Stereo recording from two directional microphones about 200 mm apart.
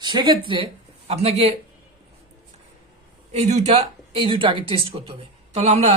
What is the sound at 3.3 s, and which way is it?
A woman's voice, 35° right (ahead or behind).